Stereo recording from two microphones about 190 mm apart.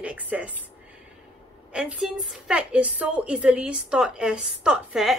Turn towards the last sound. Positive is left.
turn(degrees=-5)  # may be behind; listen again after turning